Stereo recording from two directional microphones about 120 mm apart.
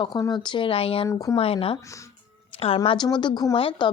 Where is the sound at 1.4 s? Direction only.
55° left (ahead or behind).